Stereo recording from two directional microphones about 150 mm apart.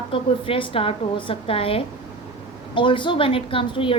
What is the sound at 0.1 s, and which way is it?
A woman's voice, 35° left (ahead or behind).